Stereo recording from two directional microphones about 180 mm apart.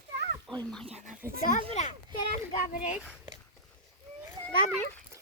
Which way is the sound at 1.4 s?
45° left (ahead or behind).